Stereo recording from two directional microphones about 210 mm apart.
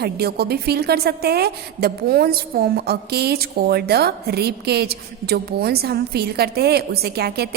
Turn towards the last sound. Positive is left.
turn(degrees=-50)  # may be behind; listen again after turning